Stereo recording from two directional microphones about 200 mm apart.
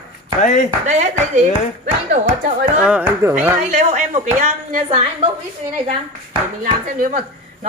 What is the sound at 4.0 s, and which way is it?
A woman's voice, 35° right (ahead or behind).